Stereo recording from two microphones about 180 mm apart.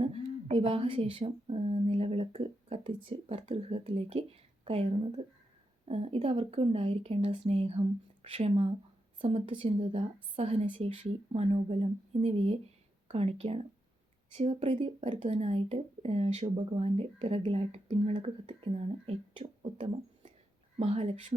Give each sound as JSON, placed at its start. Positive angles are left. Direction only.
{"t": 0.0, "sound": "a woman's voice", "side_deg": -35}